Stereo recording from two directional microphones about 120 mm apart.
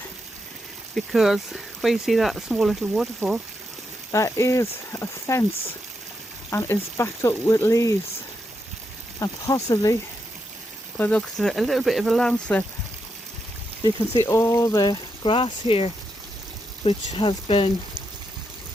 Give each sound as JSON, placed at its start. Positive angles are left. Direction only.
{"t": 0.9, "sound": "speech", "side_deg": 0}
{"t": 4.1, "sound": "speech", "side_deg": 25}
{"t": 6.5, "sound": "speech", "side_deg": 20}
{"t": 9.1, "sound": "speech", "side_deg": 30}
{"t": 10.9, "sound": "speech", "side_deg": 15}
{"t": 14.2, "sound": "speech", "side_deg": 25}